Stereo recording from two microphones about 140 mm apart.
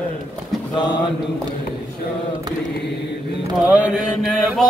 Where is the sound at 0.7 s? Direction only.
35° left (ahead or behind).